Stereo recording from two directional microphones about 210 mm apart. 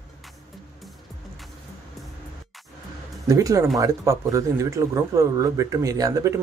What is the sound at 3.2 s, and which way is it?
Speech, 15° right (ahead or behind).